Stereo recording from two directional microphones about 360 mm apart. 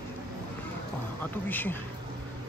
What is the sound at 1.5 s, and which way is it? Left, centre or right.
Speech, centre.